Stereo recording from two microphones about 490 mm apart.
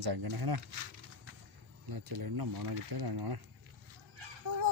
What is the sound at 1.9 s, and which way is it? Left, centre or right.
Speech, right.